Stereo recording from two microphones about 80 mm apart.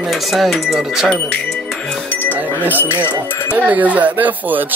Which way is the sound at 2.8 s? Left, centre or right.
Left.